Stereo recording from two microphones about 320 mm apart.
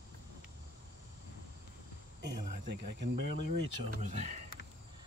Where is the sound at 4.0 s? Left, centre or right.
Right.